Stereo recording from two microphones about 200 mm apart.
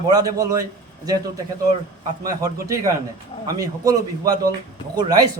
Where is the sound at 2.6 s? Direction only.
15° right (ahead or behind).